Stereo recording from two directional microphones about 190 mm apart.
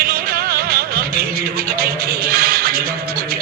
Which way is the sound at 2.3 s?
50° right (ahead or behind).